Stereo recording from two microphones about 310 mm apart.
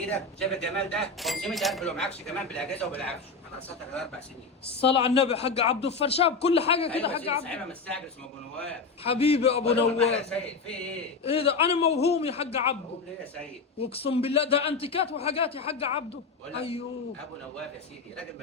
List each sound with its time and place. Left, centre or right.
0.0 s speech: centre
4.9 s a man's voice: centre
7.4 s speech: centre
9.0 s a man's voice: centre
10.2 s speech: centre
11.2 s a man's voice: centre
13.7 s a man's voice: centre